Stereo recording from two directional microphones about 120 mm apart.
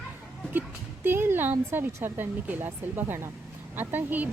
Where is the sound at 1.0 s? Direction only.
20° right (ahead or behind).